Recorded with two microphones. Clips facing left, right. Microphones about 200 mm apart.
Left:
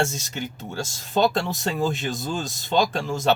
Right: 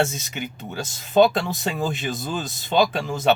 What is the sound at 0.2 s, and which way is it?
Speech, 55° right (ahead or behind).